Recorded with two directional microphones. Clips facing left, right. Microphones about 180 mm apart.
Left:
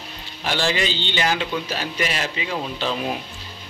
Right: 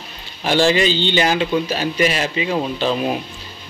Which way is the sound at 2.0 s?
15° right (ahead or behind).